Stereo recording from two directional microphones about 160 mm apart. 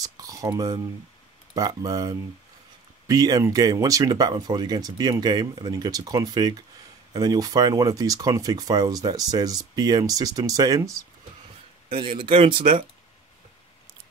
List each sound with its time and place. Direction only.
0.0 s speech: 20° right (ahead or behind)
11.9 s speech: 35° right (ahead or behind)